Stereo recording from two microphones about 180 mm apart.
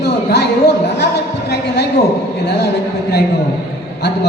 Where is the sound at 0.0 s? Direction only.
65° left (ahead or behind).